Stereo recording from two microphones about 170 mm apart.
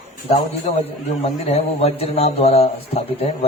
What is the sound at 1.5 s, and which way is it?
Speech, 40° left (ahead or behind).